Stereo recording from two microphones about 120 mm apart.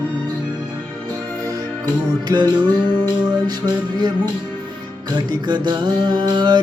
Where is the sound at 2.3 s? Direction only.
30° right (ahead or behind).